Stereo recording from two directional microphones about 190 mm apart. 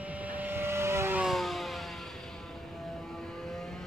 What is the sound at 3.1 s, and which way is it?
Vehicle, centre (ahead or behind).